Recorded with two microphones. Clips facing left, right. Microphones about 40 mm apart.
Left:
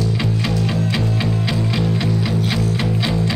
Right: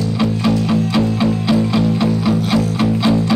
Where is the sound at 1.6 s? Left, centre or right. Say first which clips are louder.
Right 5 dB; centre.